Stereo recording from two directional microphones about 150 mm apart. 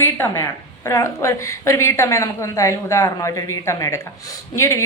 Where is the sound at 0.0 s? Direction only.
15° left (ahead or behind).